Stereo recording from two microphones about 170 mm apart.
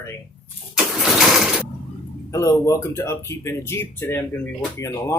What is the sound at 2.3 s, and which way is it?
Speech, 20° left (ahead or behind).